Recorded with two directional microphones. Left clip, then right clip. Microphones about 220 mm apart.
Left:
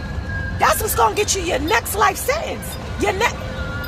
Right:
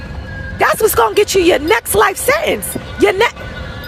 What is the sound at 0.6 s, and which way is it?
A woman's voice, 30° right (ahead or behind).